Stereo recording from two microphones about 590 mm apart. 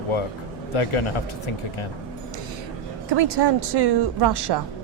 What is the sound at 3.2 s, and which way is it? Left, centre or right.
Speech, right.